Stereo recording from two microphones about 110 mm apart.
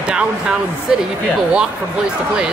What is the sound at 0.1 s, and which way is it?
Speech, 10° right (ahead or behind).